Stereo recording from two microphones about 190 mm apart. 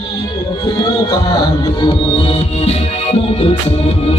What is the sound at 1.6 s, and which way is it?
Music, 30° left (ahead or behind).